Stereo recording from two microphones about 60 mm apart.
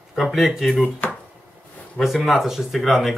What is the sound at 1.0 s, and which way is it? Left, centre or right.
Chopping, left.